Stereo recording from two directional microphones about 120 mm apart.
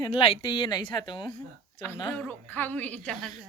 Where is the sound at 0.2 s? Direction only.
45° left (ahead or behind).